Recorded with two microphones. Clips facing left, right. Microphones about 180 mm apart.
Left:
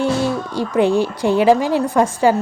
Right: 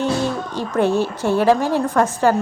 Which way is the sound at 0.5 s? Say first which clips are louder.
Left 3 dB; 10° left (ahead or behind).